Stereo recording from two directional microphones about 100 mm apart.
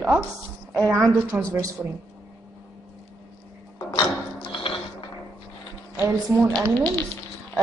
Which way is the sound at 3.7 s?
50° left (ahead or behind).